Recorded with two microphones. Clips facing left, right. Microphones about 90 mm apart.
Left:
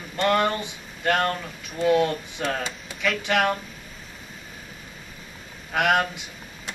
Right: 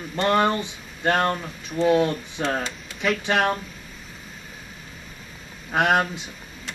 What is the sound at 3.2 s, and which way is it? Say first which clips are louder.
Speech: even; 30° right (ahead or behind).